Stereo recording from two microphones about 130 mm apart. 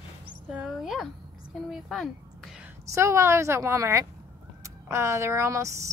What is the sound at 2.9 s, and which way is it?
A woman's voice, 20° right (ahead or behind).